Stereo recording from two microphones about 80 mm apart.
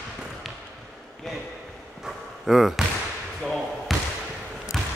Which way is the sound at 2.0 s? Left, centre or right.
Centre.